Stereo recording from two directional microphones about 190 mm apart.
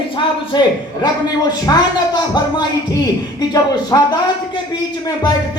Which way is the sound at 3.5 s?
20° left (ahead or behind).